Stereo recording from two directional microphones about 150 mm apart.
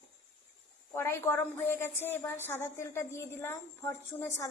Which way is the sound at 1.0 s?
15° left (ahead or behind).